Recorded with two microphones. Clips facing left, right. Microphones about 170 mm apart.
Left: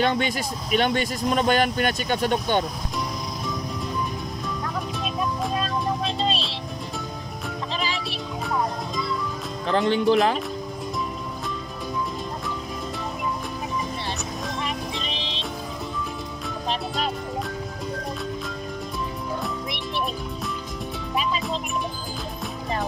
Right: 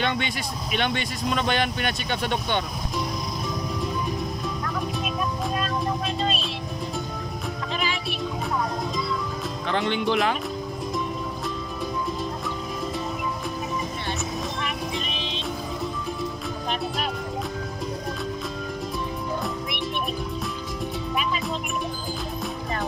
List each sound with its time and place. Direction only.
0.0 s speech: 40° left (ahead or behind)
5.6 s music: 25° left (ahead or behind)
7.7 s music: 35° left (ahead or behind)
9.7 s speech: 35° left (ahead or behind)
14.6 s music: 30° left (ahead or behind)